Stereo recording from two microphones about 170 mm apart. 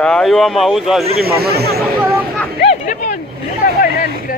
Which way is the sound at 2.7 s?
50° left (ahead or behind).